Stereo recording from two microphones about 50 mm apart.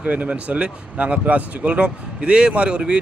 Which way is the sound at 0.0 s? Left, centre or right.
Right.